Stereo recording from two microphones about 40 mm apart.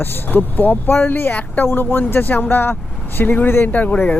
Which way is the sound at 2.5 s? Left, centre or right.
Left.